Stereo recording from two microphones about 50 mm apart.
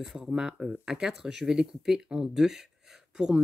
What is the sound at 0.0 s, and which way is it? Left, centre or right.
Speech, centre.